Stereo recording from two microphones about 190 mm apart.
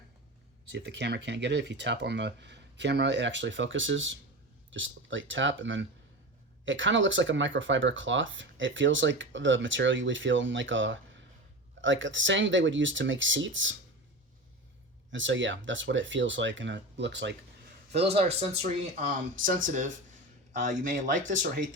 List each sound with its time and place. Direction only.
0.7 s speech: 60° right (ahead or behind); by 13.7 s 80° right
15.1 s speech: 75° right (ahead or behind)
18.0 s speech: 30° right (ahead or behind)